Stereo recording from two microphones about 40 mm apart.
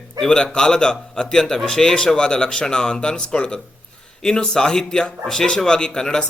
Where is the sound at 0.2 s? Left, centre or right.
Centre.